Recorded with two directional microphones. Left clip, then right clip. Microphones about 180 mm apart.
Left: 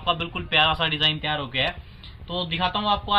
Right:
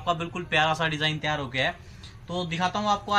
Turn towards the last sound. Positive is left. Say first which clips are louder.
# left 2 dB
turn(degrees=-20)  # may be behind; listen again after turning